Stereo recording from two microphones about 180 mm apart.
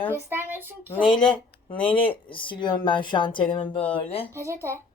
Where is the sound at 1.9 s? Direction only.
30° left (ahead or behind).